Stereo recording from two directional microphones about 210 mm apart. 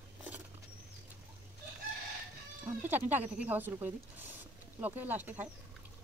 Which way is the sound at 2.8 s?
10° right (ahead or behind).